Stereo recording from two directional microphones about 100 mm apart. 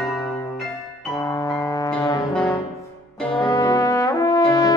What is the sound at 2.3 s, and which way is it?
Music, 10° left (ahead or behind).